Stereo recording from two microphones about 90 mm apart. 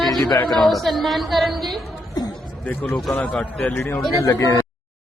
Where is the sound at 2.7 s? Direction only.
20° left (ahead or behind).